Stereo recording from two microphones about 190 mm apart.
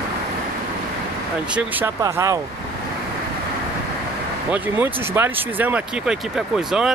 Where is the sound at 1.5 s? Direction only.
15° right (ahead or behind).